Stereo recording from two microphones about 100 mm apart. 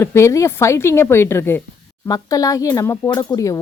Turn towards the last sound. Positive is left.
turn(degrees=35)  # may be behind; listen again after turning